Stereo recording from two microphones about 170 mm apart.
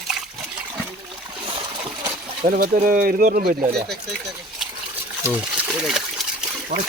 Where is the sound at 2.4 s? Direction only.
55° right (ahead or behind).